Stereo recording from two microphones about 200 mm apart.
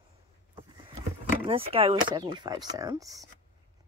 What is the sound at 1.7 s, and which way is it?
Speech, 25° right (ahead or behind).